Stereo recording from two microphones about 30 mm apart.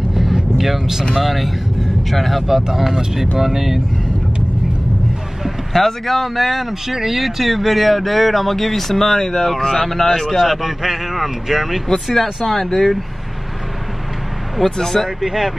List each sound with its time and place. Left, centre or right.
0.1 s vehicle: centre
0.6 s speech: centre
1.1 s speech: centre
2.4 s speech: centre
5.7 s speech: centre
9.5 s speech: centre
10.3 s speech: centre
12.4 s speech: centre
14.8 s speech: centre
15.2 s speech: centre